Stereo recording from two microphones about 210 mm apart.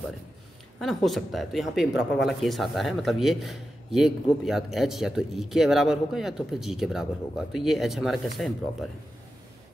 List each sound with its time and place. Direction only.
0.7 s a man's voice: centre (ahead or behind)